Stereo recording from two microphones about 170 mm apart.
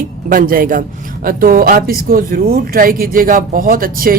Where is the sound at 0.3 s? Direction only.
55° right (ahead or behind).